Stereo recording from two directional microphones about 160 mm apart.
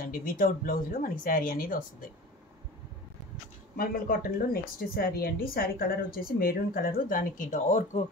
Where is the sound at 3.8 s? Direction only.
65° left (ahead or behind).